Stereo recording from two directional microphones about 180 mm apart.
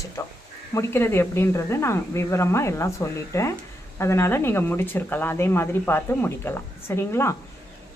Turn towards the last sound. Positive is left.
turn(degrees=15)  # may be behind; listen again after turning